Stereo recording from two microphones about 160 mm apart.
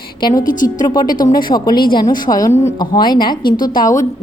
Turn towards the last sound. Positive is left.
turn(degrees=20)  # may be behind; listen again after turning